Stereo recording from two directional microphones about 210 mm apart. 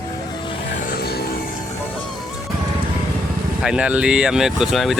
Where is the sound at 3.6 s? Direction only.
5° right (ahead or behind).